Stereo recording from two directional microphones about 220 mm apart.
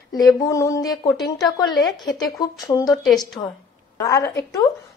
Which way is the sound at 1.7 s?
20° left (ahead or behind).